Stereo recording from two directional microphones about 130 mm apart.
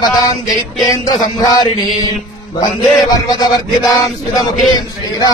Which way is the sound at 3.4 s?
25° left (ahead or behind).